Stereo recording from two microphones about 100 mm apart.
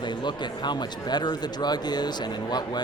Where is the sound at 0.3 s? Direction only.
50° left (ahead or behind).